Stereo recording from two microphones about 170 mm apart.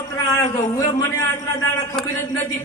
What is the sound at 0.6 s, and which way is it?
Speech, 20° left (ahead or behind).